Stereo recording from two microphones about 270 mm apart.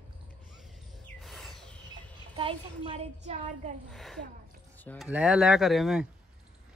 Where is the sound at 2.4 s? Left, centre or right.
Centre.